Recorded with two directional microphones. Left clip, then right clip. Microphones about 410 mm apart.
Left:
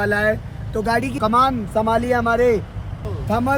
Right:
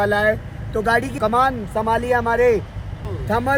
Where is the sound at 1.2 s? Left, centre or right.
Right.